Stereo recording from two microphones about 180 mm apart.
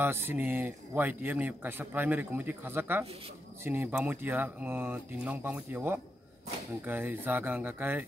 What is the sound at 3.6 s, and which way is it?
Speech, 15° right (ahead or behind).